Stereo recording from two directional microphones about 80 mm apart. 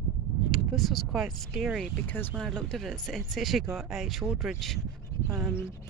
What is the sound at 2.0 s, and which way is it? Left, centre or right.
Speech, left.